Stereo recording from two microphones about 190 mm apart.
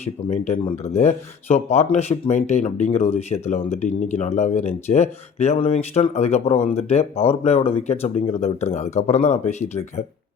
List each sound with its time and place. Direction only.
0.0 s speech: 35° left (ahead or behind)